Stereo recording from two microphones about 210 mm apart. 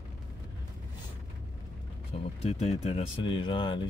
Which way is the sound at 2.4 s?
30° left (ahead or behind).